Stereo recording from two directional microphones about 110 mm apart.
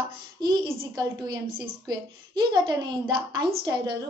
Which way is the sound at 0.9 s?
40° right (ahead or behind).